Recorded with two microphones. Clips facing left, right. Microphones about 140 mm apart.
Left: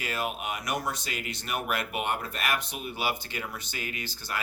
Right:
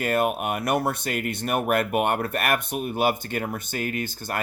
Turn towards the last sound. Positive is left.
turn(degrees=-50)  # may be behind; listen again after turning